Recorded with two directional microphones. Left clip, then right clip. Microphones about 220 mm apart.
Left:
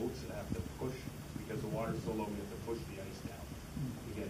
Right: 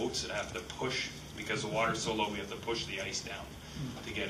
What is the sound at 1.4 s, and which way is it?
Speech, 10° right (ahead or behind).